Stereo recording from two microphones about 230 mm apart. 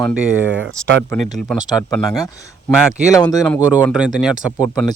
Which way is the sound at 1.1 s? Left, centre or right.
Centre.